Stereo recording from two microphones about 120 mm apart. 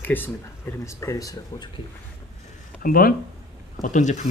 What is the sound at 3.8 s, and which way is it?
Speech, 90° left.